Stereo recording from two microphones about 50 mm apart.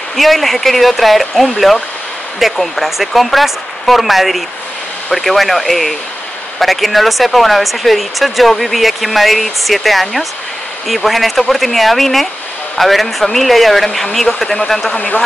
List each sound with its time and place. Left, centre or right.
0.1 s speech: centre
15.0 s speech: left